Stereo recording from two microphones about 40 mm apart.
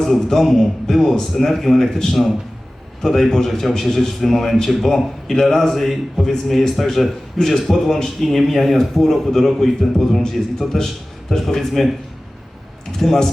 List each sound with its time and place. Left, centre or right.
0.0 s a man's voice: centre
3.0 s a man's voice: centre
13.0 s speech: centre